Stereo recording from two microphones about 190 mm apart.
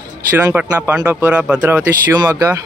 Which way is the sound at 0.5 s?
10° right (ahead or behind).